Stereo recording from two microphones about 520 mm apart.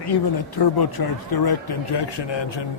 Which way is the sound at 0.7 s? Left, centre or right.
Left.